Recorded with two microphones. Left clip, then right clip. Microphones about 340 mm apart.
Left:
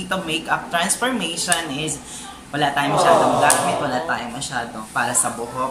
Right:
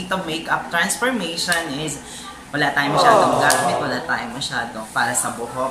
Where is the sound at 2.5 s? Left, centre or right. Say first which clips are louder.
Right 1 dB; centre.